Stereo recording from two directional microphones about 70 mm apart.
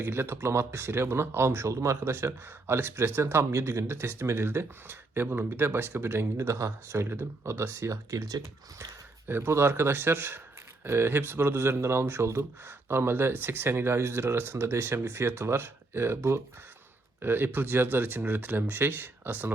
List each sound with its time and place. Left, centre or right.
0.0 s speech: right
9.2 s speech: right